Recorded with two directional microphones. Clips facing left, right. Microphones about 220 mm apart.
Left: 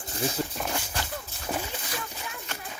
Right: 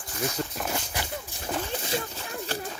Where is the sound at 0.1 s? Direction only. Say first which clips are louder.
Left 1 dB; 30° left (ahead or behind).